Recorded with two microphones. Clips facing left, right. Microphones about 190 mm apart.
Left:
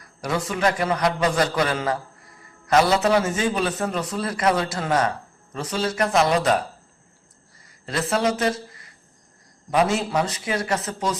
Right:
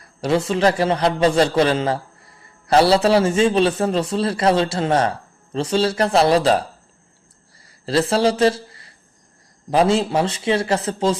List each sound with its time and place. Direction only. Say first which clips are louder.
0.0 s a man's voice: right 7 dB; 30° right (ahead or behind)
7.9 s a man's voice: right 5 dB; 30° right (ahead or behind)